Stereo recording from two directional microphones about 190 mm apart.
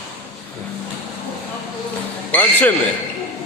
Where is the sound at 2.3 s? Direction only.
10° left (ahead or behind).